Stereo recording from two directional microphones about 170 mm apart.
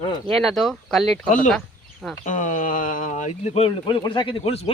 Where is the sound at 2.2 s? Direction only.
50° left (ahead or behind); by 4.7 s 35° left (ahead or behind).